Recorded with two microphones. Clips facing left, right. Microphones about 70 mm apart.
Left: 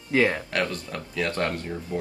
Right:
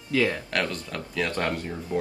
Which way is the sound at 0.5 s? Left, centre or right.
Centre.